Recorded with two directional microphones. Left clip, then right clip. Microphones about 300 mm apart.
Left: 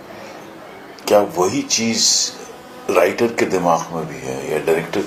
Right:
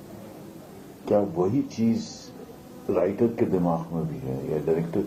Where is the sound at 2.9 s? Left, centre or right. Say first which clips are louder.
Left 8 dB; centre.